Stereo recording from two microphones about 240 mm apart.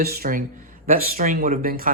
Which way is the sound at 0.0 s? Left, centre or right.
Right.